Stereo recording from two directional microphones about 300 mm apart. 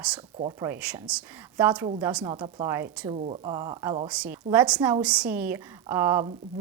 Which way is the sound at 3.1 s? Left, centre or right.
Right.